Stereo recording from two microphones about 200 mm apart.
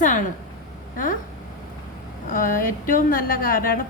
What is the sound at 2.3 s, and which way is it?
A woman's voice, 45° left (ahead or behind).